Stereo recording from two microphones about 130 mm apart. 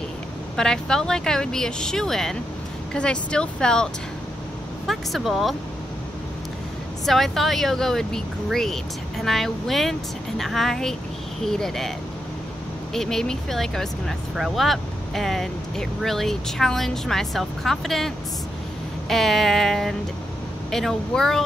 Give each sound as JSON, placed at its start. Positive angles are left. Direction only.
{"t": 0.6, "sound": "speech", "side_deg": 5}
{"t": 7.1, "sound": "speech", "side_deg": 0}
{"t": 12.9, "sound": "speech", "side_deg": 5}